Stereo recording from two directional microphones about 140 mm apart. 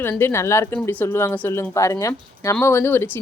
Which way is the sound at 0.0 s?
15° left (ahead or behind).